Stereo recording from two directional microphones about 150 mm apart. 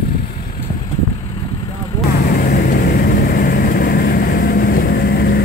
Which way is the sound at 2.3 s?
65° left (ahead or behind).